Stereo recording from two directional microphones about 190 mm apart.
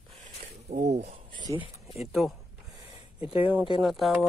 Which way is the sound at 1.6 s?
30° left (ahead or behind).